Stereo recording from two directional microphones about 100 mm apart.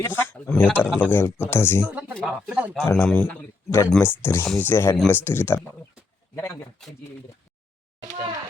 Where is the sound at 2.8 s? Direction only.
30° left (ahead or behind).